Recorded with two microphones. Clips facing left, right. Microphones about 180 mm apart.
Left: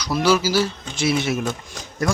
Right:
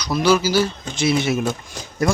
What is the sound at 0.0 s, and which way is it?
Speech, 5° left (ahead or behind).